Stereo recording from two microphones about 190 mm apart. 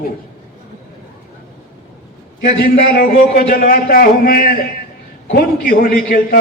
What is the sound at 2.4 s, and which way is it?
A man's voice, 50° left (ahead or behind).